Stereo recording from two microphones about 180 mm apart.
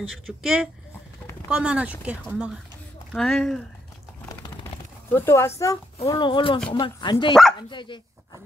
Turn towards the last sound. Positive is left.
turn(degrees=25)  # may be behind; listen again after turning